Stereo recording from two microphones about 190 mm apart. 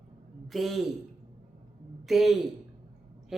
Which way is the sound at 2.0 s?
Centre (ahead or behind).